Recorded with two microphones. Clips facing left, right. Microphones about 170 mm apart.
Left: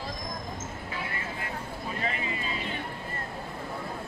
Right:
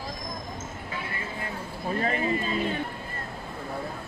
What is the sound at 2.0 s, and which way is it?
Speech, 40° right (ahead or behind).